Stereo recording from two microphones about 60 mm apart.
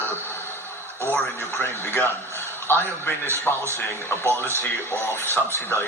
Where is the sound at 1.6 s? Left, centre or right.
Left.